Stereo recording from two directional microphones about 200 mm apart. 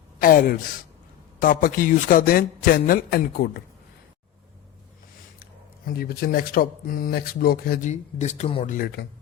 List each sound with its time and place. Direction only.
0.2 s speech: 45° left (ahead or behind)
5.4 s speech: 50° left (ahead or behind); by 8.7 s 30° left (ahead or behind)
8.7 s speech: 45° left (ahead or behind)